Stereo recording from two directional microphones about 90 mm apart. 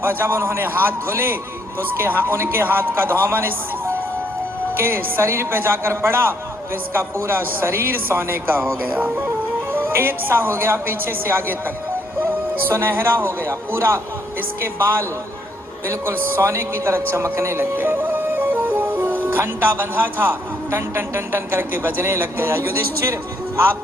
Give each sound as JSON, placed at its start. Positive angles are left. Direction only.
{"t": 0.0, "sound": "a man's voice", "side_deg": -25}